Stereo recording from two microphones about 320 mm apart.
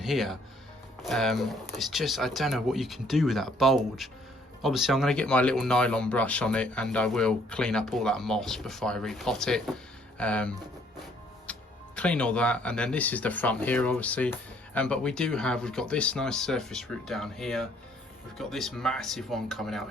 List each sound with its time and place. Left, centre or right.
0.0 s speech: centre
11.5 s music: centre
11.9 s speech: centre